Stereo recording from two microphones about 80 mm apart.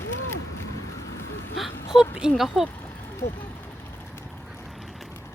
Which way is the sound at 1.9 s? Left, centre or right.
Centre.